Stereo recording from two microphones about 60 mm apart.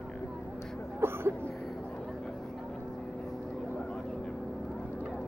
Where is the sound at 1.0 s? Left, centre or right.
Right.